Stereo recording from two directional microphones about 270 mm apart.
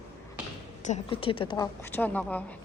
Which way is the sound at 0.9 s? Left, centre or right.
Centre.